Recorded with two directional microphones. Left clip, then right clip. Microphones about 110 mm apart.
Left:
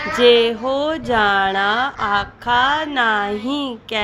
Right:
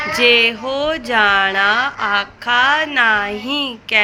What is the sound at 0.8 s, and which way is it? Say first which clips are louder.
A woman's voice: right 4 dB; 50° left (ahead or behind).